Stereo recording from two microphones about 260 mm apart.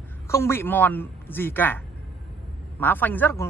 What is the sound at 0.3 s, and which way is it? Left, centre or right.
Speech, centre.